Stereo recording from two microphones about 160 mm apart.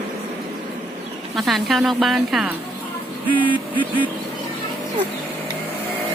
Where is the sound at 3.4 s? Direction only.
30° left (ahead or behind).